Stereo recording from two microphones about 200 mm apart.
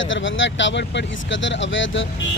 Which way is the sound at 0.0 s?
70° left (ahead or behind).